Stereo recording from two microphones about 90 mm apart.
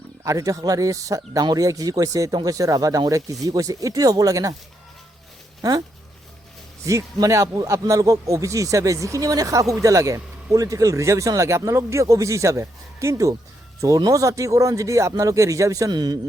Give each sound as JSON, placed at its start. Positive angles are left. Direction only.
{"t": 0.3, "sound": "speech", "side_deg": -40}
{"t": 6.8, "sound": "speech", "side_deg": -35}
{"t": 15.9, "sound": "speech", "side_deg": -50}